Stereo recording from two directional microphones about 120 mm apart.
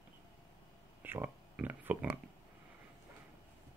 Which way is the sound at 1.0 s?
15° right (ahead or behind).